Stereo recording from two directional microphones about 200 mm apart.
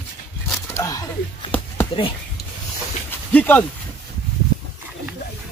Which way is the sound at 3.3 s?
10° left (ahead or behind).